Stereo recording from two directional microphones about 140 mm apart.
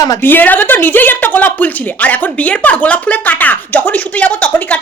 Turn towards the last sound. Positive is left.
turn(degrees=10)  # may be behind; listen again after turning